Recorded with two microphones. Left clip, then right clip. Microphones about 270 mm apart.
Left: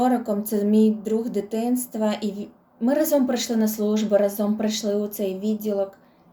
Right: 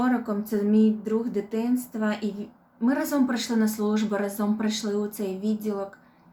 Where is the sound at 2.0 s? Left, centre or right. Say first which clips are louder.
Left 4 dB; centre.